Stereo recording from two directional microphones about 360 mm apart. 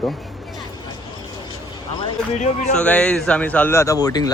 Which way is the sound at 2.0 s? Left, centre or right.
Centre.